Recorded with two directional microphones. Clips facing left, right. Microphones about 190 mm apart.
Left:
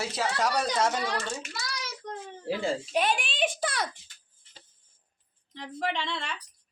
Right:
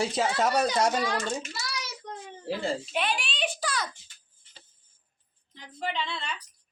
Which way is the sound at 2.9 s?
45° left (ahead or behind).